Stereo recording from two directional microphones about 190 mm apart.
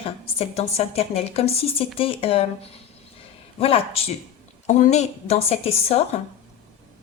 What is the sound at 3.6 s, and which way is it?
Speech, 30° left (ahead or behind).